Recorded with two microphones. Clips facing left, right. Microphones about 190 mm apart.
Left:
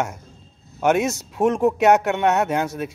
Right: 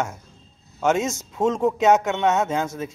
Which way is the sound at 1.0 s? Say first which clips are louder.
Left 3 dB; 65° left (ahead or behind).